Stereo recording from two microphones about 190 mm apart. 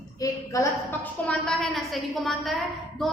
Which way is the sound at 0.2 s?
15° left (ahead or behind).